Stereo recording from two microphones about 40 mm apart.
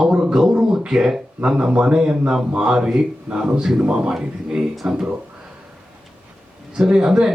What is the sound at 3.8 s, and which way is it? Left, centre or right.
Speech, right.